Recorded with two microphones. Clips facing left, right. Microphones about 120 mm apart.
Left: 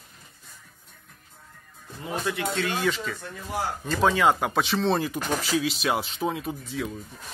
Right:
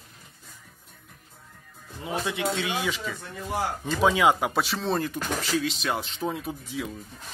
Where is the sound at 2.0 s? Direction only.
20° right (ahead or behind); by 5.0 s centre (ahead or behind).